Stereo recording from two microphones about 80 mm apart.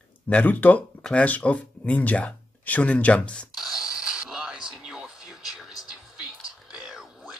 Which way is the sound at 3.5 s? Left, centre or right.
Centre.